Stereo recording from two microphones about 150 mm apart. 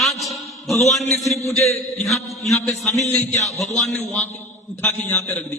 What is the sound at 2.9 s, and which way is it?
Speech, 50° left (ahead or behind).